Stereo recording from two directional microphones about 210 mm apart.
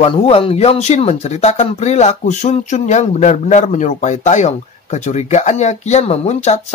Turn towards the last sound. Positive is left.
turn(degrees=30)  # may be behind; listen again after turning